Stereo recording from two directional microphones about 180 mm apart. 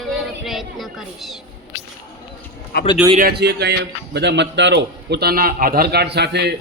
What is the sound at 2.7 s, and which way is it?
Speech, 65° left (ahead or behind).